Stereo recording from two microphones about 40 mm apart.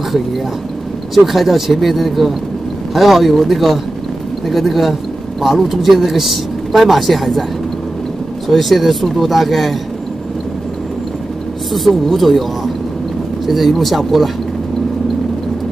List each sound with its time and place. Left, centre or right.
1.1 s speech: centre
8.5 s speech: centre
11.7 s speech: centre
13.5 s speech: centre